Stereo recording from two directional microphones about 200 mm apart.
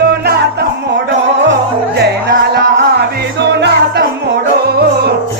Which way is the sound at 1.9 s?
55° right (ahead or behind).